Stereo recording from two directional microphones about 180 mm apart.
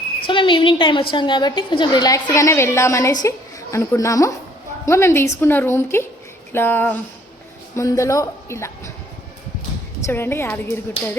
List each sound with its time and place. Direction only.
0.3 s a woman's voice: 25° left (ahead or behind)
10.1 s a woman's voice: 15° left (ahead or behind)